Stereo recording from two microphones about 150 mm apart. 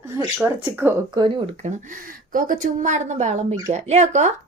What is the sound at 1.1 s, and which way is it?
Speech, 30° right (ahead or behind).